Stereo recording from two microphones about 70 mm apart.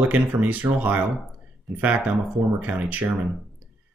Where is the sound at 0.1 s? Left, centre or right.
Right.